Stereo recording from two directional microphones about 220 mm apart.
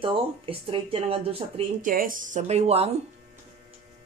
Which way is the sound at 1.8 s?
40° right (ahead or behind).